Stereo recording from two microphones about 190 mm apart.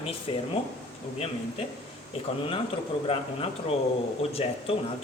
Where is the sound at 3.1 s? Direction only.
30° left (ahead or behind).